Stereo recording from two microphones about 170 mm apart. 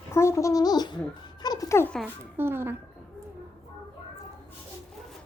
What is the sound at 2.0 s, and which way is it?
Speech, 15° right (ahead or behind).